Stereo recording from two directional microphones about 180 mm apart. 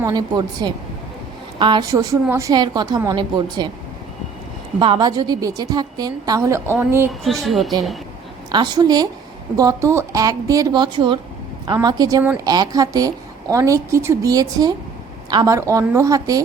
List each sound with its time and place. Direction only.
0.0 s a woman's voice: 20° right (ahead or behind)
4.8 s a woman's voice: 25° right (ahead or behind)
7.1 s speech: centre (ahead or behind)
8.5 s a woman's voice: 25° right (ahead or behind)